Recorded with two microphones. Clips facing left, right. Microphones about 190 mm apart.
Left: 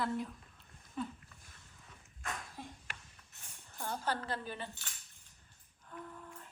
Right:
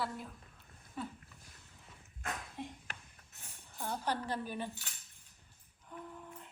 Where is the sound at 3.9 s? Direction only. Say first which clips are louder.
Right 1 dB; 10° right (ahead or behind).